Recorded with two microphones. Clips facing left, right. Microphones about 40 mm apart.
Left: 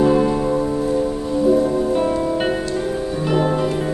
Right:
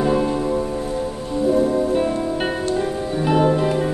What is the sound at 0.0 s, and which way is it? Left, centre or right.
Music, centre.